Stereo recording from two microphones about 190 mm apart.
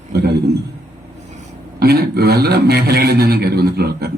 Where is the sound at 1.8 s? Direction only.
55° right (ahead or behind).